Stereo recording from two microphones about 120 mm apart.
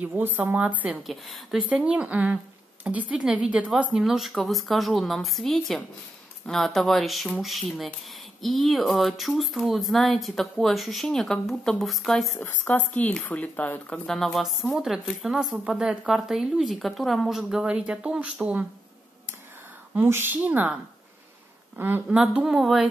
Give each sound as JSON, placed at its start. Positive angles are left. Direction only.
{"t": 0.0, "sound": "a woman's voice", "side_deg": -15}
{"t": 1.0, "sound": "speech", "side_deg": 0}
{"t": 12.4, "sound": "speech", "side_deg": 15}
{"t": 20.0, "sound": "a woman's voice", "side_deg": -20}
{"t": 22.2, "sound": "speech", "side_deg": -5}